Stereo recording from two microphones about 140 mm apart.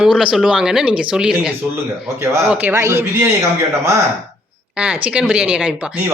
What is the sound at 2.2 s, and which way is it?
Speech, 20° right (ahead or behind).